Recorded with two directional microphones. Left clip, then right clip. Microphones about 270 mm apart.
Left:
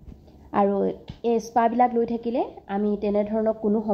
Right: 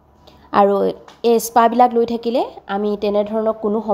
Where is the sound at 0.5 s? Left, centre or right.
Right.